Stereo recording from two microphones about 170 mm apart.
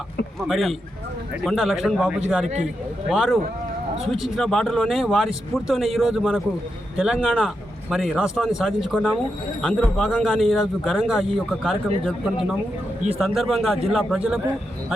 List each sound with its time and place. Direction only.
0.3 s speech: centre (ahead or behind)
3.9 s a man's voice: 35° right (ahead or behind)
4.4 s speech: centre (ahead or behind)